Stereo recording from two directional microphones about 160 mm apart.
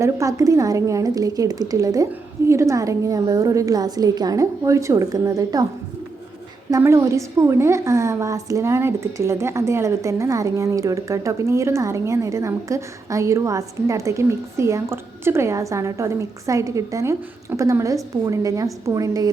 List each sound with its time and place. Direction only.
0.0 s a woman's voice: 20° right (ahead or behind)
6.7 s a woman's voice: 20° right (ahead or behind)